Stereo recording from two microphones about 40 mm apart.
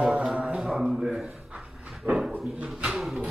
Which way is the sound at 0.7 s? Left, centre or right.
Centre.